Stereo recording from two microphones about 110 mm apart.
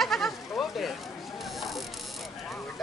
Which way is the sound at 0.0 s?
Centre (ahead or behind).